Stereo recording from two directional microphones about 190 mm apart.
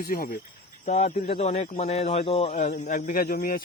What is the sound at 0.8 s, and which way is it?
A man's voice, 35° left (ahead or behind).